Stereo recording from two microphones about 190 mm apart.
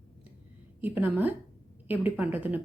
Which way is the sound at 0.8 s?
10° right (ahead or behind).